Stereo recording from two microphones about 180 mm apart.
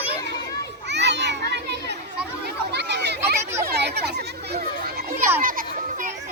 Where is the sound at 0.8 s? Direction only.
75° right (ahead or behind).